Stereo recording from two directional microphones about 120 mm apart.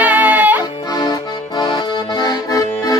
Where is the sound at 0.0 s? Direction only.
15° right (ahead or behind).